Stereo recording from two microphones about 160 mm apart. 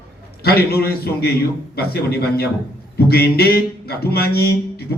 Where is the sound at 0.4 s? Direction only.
85° left.